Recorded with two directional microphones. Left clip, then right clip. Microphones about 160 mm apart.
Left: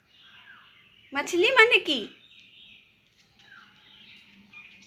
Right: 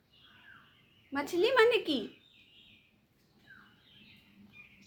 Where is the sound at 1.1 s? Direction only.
40° left (ahead or behind).